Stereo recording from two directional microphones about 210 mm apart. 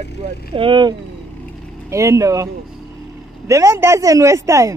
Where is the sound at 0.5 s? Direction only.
25° right (ahead or behind).